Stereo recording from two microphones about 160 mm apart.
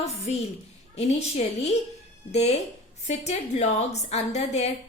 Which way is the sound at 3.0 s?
45° left (ahead or behind).